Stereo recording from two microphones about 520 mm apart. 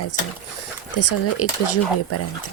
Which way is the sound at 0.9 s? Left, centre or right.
Left.